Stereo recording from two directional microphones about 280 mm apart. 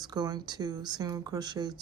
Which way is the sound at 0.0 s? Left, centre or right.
Centre.